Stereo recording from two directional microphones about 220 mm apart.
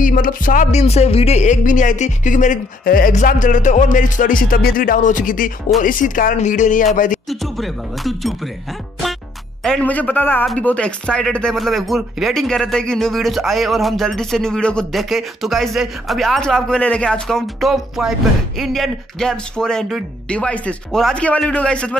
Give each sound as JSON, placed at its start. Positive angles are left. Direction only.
{"t": 0.0, "sound": "speech", "side_deg": 40}
{"t": 7.2, "sound": "speech", "side_deg": 0}
{"t": 9.6, "sound": "a man's voice", "side_deg": 5}